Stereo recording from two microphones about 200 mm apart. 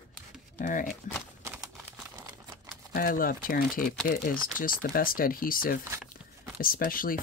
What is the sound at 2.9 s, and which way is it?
Speech, 45° left (ahead or behind).